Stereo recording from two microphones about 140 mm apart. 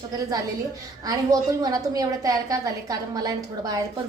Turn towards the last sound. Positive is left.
turn(degrees=-25)  # may be behind; listen again after turning